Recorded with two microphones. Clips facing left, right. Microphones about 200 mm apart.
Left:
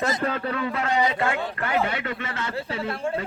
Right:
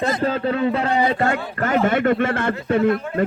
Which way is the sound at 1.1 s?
40° right (ahead or behind).